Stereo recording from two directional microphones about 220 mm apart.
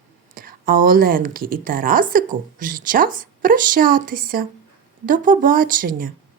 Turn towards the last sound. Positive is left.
turn(degrees=-40)  # may be behind; listen again after turning